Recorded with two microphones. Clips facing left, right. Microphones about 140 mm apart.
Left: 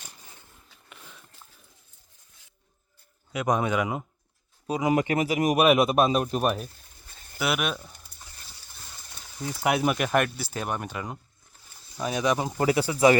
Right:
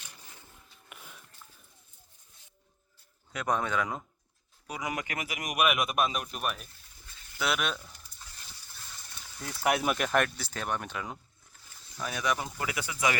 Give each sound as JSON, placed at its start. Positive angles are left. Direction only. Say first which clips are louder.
{"t": 0.9, "sound": "a sound", "louder": "left 1 dB", "side_deg": -10}
{"t": 3.3, "sound": "speech", "louder": "left 5 dB", "side_deg": 10}
{"t": 4.6, "sound": "speech", "louder": "left 12 dB", "side_deg": 25}
{"t": 7.1, "sound": "a sound", "louder": "left 4 dB", "side_deg": 45}
{"t": 7.3, "sound": "speech", "louder": "left 4 dB", "side_deg": 5}
{"t": 8.1, "sound": "a sound", "louder": "left 2 dB", "side_deg": 70}
{"t": 9.6, "sound": "speech", "louder": "left 3 dB", "side_deg": 0}
{"t": 11.9, "sound": "speech", "louder": "left 6 dB", "side_deg": 20}
{"t": 12.5, "sound": "speech", "louder": "left 11 dB", "side_deg": 35}